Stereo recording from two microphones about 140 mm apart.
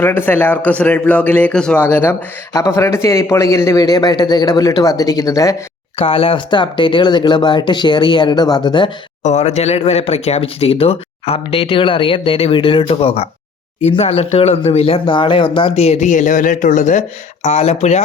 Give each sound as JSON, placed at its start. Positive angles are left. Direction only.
{"t": 0.0, "sound": "a man's voice", "side_deg": 15}
{"t": 6.0, "sound": "speech", "side_deg": 40}
{"t": 9.2, "sound": "speech", "side_deg": 55}
{"t": 17.4, "sound": "speech", "side_deg": 50}